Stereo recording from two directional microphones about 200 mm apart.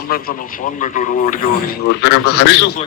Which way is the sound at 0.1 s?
45° left (ahead or behind).